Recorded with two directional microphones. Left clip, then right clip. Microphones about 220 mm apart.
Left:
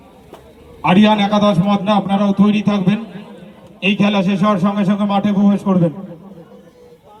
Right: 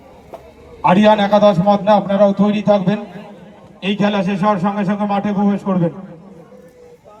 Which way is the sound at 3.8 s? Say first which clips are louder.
Left 1 dB; 35° left (ahead or behind).